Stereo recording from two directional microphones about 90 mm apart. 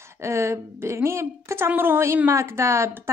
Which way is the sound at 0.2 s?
30° right (ahead or behind).